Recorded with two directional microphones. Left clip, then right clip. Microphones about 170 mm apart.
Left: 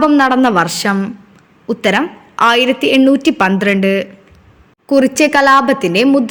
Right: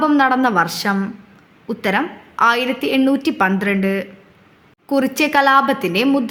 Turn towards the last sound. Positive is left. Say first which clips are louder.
# left 5 dB
turn(degrees=15)  # may be behind; listen again after turning